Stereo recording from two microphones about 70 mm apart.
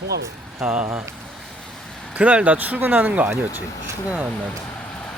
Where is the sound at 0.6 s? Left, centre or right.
Centre.